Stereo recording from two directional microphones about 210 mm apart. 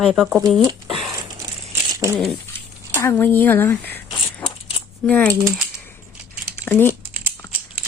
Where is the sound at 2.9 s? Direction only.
10° left (ahead or behind).